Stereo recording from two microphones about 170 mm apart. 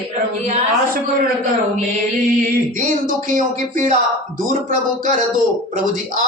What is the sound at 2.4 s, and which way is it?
Speech, 55° right (ahead or behind).